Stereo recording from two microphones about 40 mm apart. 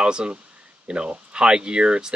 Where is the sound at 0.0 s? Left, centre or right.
Right.